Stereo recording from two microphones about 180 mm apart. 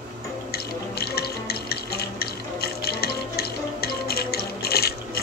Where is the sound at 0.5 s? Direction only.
60° left (ahead or behind).